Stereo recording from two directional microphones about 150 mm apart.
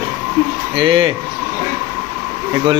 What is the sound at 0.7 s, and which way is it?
Speech, 35° right (ahead or behind).